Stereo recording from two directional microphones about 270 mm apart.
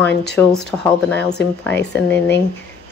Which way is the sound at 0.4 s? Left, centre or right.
Centre.